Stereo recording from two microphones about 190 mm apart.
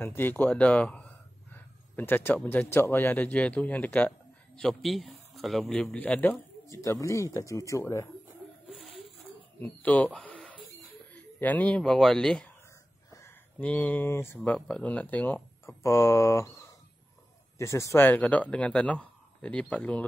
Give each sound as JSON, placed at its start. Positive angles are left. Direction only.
{"t": 0.0, "sound": "speech", "side_deg": 10}
{"t": 8.6, "sound": "a sound", "side_deg": 0}
{"t": 9.6, "sound": "speech", "side_deg": 10}